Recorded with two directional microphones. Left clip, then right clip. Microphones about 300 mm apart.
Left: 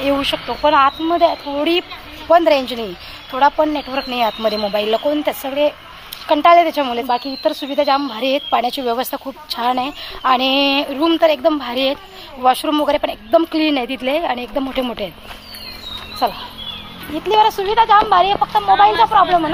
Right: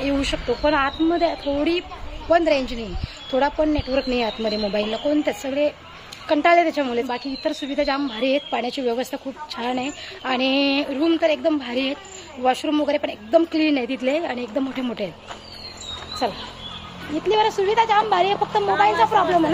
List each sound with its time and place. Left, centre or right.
0.0 s speech: centre
17.3 s speech: centre